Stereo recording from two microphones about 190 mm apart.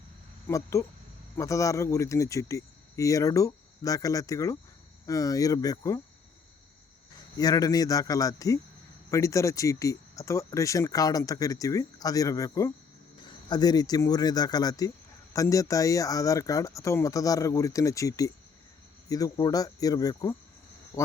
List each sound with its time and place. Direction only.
0.4 s speech: 15° left (ahead or behind)
7.3 s speech: 20° left (ahead or behind)
20.9 s a sound: 15° left (ahead or behind)